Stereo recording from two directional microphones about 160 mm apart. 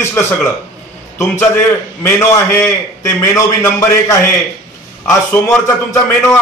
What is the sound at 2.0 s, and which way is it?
Mantra, 15° left (ahead or behind).